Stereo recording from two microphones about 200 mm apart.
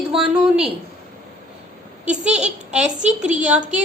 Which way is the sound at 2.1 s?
5° right (ahead or behind).